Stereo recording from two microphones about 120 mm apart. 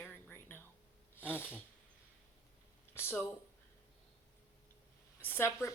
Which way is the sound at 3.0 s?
20° left (ahead or behind).